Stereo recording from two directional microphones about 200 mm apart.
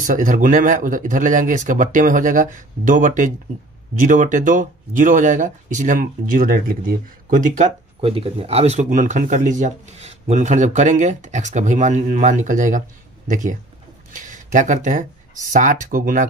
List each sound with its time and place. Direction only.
0.0 s speech: 40° right (ahead or behind)